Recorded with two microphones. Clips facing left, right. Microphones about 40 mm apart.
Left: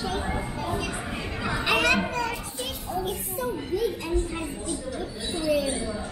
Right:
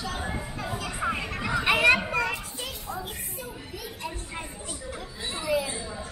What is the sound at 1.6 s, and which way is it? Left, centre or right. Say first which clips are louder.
Children playing: right 2 dB; centre.